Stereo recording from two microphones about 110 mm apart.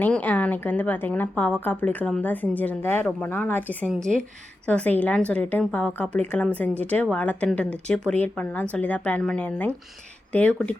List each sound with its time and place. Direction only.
0.0 s speech: 15° left (ahead or behind)